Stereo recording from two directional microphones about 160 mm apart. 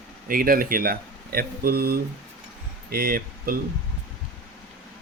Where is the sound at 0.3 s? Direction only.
65° right (ahead or behind).